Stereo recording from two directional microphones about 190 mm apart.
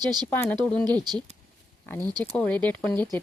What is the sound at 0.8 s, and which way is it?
Speech, 20° right (ahead or behind).